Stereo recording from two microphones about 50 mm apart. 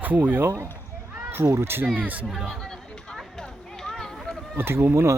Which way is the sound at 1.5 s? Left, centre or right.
Right.